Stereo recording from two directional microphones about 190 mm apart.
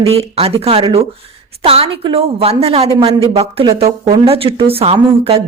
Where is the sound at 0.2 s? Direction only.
30° right (ahead or behind).